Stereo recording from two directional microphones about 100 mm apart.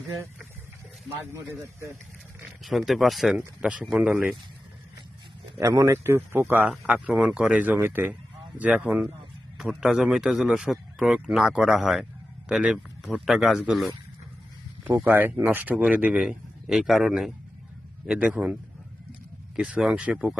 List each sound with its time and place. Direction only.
2.6 s a man's voice: centre (ahead or behind)
3.3 s speech: 10° right (ahead or behind)
5.5 s speech: 35° right (ahead or behind)
6.7 s a man's voice: 10° right (ahead or behind)
15.0 s speech: 15° right (ahead or behind)
16.2 s speech: 5° right (ahead or behind)
19.5 s speech: 10° right (ahead or behind)